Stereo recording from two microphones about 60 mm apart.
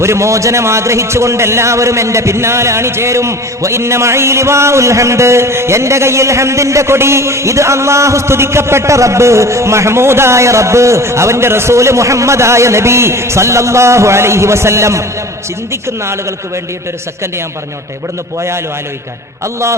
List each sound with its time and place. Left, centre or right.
0.0 s a man's voice: right